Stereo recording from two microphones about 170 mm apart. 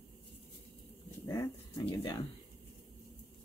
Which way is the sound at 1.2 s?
20° left (ahead or behind).